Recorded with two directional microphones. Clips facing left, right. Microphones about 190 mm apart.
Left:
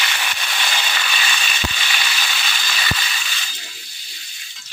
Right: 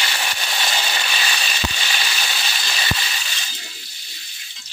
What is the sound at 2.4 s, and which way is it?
Water, 30° right (ahead or behind).